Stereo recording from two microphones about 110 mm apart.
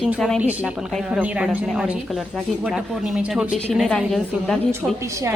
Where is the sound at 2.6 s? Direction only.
10° right (ahead or behind).